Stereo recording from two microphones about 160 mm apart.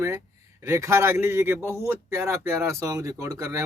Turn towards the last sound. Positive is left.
turn(degrees=-20)  # may be behind; listen again after turning